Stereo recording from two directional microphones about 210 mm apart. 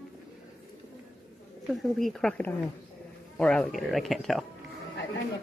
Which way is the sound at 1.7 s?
Centre (ahead or behind).